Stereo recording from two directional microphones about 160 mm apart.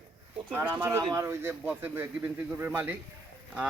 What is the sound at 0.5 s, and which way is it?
A man's voice, 10° right (ahead or behind).